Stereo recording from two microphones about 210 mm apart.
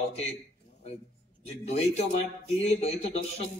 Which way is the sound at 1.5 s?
30° left (ahead or behind).